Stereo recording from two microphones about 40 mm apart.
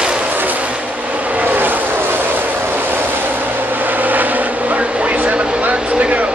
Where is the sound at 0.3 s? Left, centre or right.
Right.